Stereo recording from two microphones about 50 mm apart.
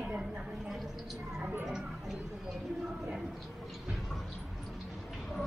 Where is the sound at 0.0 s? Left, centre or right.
Centre.